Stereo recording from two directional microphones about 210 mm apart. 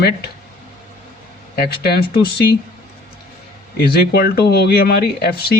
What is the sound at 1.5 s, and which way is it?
Speech, 50° left (ahead or behind).